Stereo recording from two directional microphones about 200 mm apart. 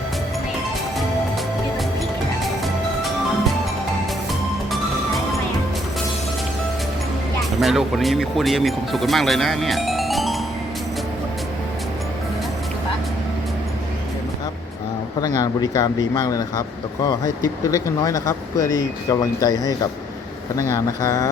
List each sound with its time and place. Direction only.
4.7 s music: centre (ahead or behind)
7.6 s speech: centre (ahead or behind)
15.4 s speech: 20° left (ahead or behind)